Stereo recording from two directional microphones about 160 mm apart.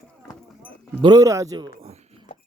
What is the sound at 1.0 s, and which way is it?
Speech, 25° right (ahead or behind).